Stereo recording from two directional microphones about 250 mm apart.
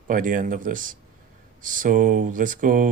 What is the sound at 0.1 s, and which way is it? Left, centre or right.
Speech, right.